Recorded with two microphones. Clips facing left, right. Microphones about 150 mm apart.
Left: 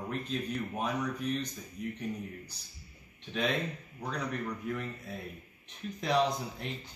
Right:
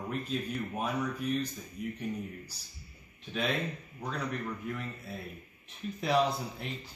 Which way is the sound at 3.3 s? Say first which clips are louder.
Left 1 dB; 5° right (ahead or behind).